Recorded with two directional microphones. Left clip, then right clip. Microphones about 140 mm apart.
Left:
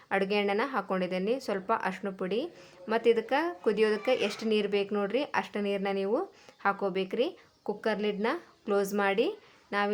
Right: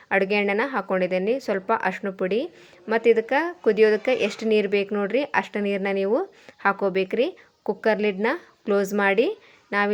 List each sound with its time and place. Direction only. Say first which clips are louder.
0.1 s speech: right 7 dB; 30° right (ahead or behind)